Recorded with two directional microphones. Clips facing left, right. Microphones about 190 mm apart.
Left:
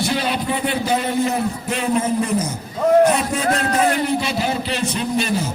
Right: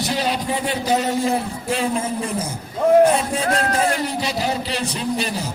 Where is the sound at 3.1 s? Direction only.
30° right (ahead or behind).